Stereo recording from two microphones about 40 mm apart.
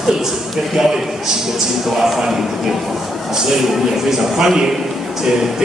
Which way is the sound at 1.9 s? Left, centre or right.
Centre.